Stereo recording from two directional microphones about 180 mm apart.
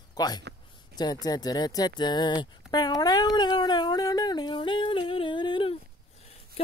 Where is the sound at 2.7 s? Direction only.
20° left (ahead or behind).